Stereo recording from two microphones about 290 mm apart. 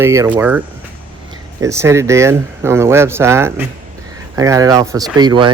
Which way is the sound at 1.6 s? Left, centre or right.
Centre.